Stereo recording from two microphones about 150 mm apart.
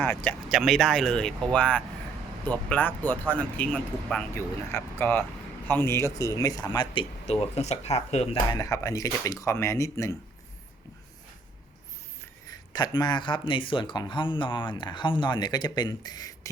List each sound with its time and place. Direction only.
0.0 s speech: 10° left (ahead or behind); by 7.0 s 25° left (ahead or behind)
7.4 s speech: 45° left (ahead or behind)
8.4 s speech: 20° left (ahead or behind)
12.5 s speech: 30° left (ahead or behind)